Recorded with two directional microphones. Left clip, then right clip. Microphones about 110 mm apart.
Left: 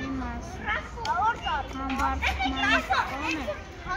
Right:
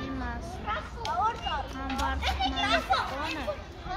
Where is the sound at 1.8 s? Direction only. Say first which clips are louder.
Left 4 dB; 5° right (ahead or behind).